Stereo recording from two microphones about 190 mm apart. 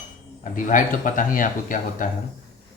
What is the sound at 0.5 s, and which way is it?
Speech, 45° left (ahead or behind).